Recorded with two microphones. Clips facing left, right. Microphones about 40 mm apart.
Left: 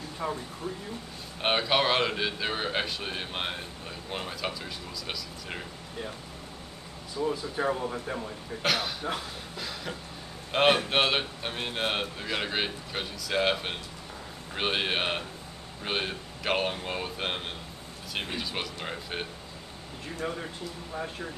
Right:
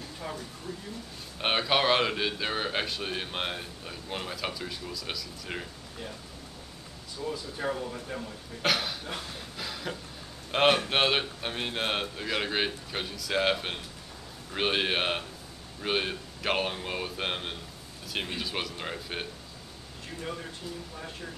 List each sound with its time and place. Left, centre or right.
1.4 s a man's voice: centre
7.2 s speech: left
8.6 s a man's voice: centre
9.6 s a sound: centre
10.5 s a man's voice: centre